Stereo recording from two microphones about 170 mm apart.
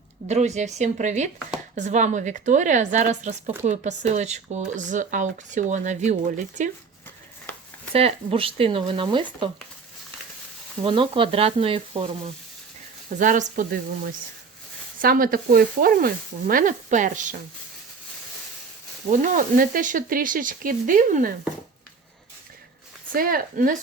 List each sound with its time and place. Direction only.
0.3 s speech: 40° right (ahead or behind)
7.9 s speech: 35° right (ahead or behind)
10.8 s speech: 30° right (ahead or behind)
13.1 s speech: 50° right (ahead or behind)
19.2 s speech: 50° right (ahead or behind)
23.1 s speech: 55° right (ahead or behind)